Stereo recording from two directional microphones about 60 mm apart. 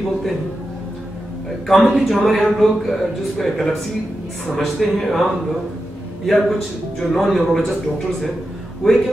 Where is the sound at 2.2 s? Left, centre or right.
Centre.